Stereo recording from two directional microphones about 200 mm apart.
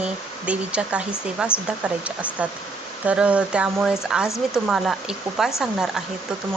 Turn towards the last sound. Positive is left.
turn(degrees=-5)  # may be behind; listen again after turning